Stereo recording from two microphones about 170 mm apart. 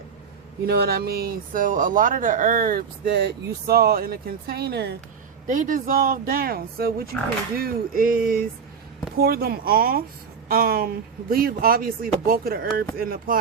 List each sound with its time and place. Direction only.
0.6 s speech: 70° right (ahead or behind)
5.5 s speech: 50° right (ahead or behind)